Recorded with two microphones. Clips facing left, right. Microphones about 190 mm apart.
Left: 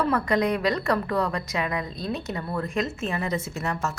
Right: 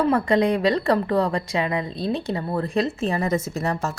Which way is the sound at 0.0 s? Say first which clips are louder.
Right 4 dB; 30° right (ahead or behind).